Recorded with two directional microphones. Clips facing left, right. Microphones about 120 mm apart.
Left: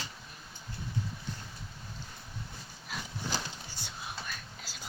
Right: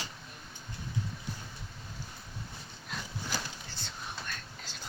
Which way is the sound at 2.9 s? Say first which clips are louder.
Even; 5° left (ahead or behind).